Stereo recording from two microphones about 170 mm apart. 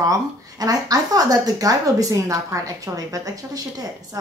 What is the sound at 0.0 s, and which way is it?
Speech, 20° right (ahead or behind).